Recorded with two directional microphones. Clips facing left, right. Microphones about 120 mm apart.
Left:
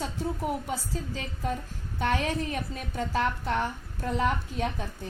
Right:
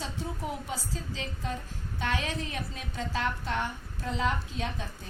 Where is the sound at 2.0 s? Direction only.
50° left (ahead or behind).